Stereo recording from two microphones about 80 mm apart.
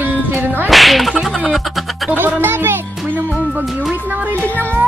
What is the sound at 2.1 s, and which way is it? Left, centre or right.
Music, right.